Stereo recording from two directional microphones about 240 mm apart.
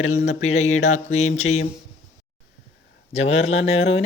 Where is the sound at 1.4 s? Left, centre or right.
Left.